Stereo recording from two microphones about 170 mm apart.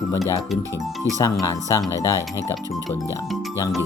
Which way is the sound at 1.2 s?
20° left (ahead or behind).